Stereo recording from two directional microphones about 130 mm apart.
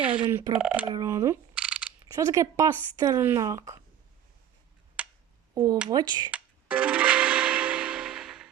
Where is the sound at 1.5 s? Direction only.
10° right (ahead or behind).